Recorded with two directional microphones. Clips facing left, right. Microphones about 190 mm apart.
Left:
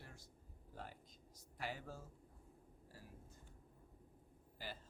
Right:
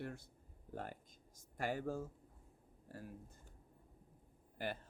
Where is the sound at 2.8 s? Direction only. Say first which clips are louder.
Right 10 dB; 55° right (ahead or behind).